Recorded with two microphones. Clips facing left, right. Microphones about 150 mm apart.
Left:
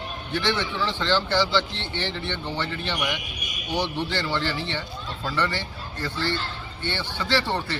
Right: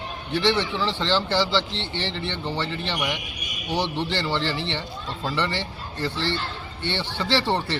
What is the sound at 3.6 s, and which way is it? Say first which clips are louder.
Speech: right 1 dB; 30° right (ahead or behind).